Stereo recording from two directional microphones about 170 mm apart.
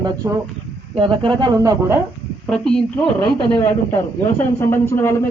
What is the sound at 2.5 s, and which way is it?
Speech, 5° left (ahead or behind).